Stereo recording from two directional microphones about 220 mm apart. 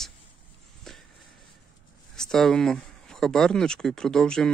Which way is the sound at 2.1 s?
Centre (ahead or behind).